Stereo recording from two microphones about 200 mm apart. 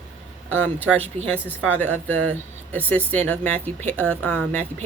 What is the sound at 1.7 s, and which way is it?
Speech, 10° left (ahead or behind).